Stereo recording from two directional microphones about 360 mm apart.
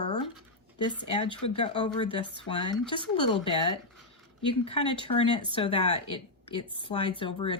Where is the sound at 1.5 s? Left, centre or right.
Centre.